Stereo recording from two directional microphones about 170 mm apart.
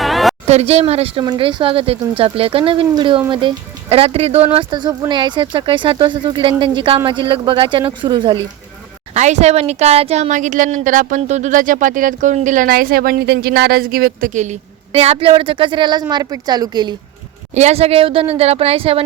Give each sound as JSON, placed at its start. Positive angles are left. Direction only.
{"t": 0.0, "sound": "a sound", "side_deg": 0}
{"t": 0.4, "sound": "speech", "side_deg": -40}
{"t": 4.5, "sound": "speech", "side_deg": -25}
{"t": 9.1, "sound": "speech", "side_deg": -45}
{"t": 17.5, "sound": "speech", "side_deg": -40}